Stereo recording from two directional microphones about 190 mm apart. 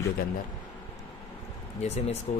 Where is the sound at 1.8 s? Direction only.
35° left (ahead or behind).